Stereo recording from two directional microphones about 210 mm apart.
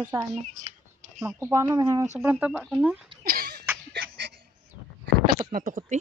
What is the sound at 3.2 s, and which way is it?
Cough, 45° right (ahead or behind).